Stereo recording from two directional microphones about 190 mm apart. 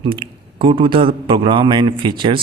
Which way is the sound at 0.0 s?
25° right (ahead or behind).